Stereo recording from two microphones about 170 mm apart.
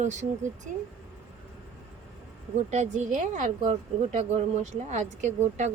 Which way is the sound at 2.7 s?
40° right (ahead or behind).